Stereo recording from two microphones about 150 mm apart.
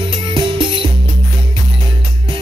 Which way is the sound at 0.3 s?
35° right (ahead or behind).